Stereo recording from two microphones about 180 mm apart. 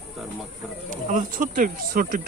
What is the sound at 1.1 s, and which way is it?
A man's voice, 50° right (ahead or behind).